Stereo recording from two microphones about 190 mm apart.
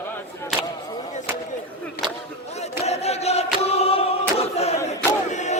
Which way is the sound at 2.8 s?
35° left (ahead or behind).